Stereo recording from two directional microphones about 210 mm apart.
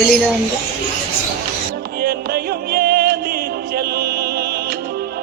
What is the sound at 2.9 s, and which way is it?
Music, 45° right (ahead or behind).